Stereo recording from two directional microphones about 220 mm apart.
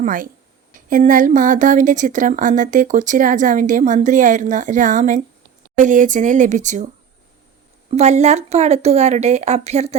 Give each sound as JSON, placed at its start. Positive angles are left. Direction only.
{"t": 0.0, "sound": "a woman's voice", "side_deg": -40}
{"t": 7.9, "sound": "speech", "side_deg": -30}